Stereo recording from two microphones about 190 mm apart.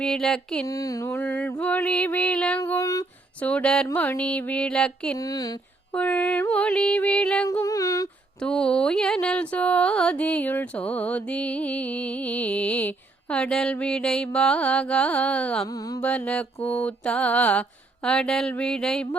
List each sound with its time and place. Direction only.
0.0 s mantra: 5° left (ahead or behind)
0.7 s music: 15° left (ahead or behind)
3.4 s mantra: 5° left (ahead or behind)
3.8 s music: 10° left (ahead or behind)
5.1 s speech: 20° left (ahead or behind)
5.9 s music: 5° left (ahead or behind)
7.4 s music: 15° left (ahead or behind)
8.4 s music: 5° left (ahead or behind)
15.6 s music: 15° left (ahead or behind)
16.6 s mantra: 5° left (ahead or behind)